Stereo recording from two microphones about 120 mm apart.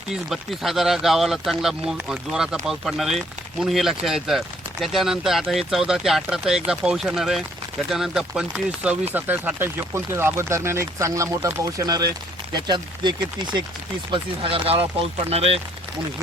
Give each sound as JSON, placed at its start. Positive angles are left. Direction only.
{"t": 0.1, "sound": "speech", "side_deg": 0}
{"t": 14.1, "sound": "speech", "side_deg": -50}